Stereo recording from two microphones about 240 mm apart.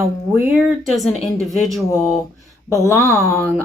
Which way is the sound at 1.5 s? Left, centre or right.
Centre.